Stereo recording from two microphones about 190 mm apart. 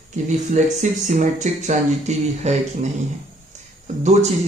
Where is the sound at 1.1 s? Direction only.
40° right (ahead or behind).